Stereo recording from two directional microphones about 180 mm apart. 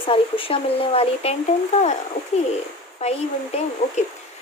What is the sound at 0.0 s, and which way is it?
Speech, 30° left (ahead or behind).